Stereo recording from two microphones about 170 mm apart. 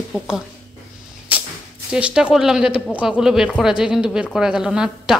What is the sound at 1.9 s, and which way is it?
A woman's voice, 5° right (ahead or behind).